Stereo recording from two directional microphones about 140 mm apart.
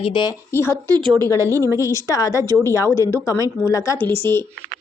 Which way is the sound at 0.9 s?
30° right (ahead or behind).